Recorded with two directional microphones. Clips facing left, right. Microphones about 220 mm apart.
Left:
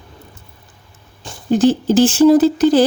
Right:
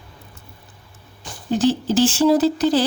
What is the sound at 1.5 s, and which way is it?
Speech, 50° left (ahead or behind).